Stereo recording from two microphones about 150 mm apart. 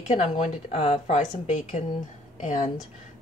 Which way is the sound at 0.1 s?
45° left (ahead or behind).